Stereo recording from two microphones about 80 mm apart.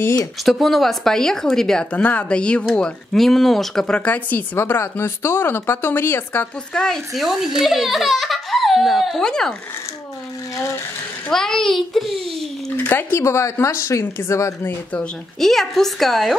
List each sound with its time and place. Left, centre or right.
0.5 s a child's voice: centre
1.9 s speech: centre
6.7 s speech: centre
7.2 s a child's voice: centre
11.3 s a child's voice: centre
12.7 s speech: left
15.4 s a child's voice: centre